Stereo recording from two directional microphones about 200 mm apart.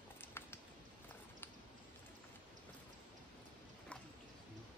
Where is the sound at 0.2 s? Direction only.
10° left (ahead or behind).